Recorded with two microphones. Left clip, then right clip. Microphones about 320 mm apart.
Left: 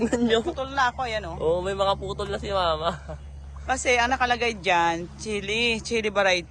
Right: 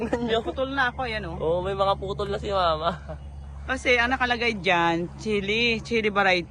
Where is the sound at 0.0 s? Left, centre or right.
Left.